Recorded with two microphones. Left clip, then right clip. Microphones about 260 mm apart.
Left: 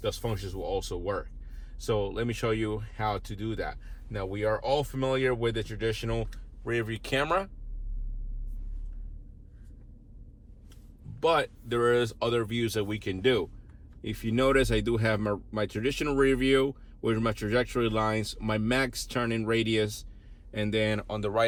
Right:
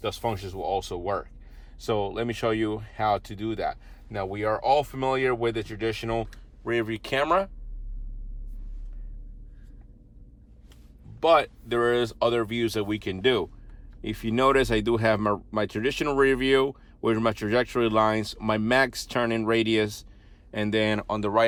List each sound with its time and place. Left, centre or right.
0.0 s speech: right
11.2 s speech: right